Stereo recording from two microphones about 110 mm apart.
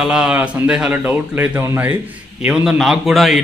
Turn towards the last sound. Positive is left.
turn(degrees=0)  # may be behind; listen again after turning